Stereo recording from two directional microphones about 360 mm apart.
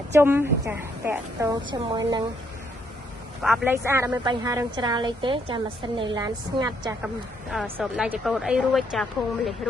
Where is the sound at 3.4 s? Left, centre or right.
Centre.